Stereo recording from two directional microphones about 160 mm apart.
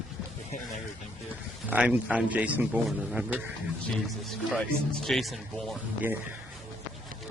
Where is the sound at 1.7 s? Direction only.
5° right (ahead or behind).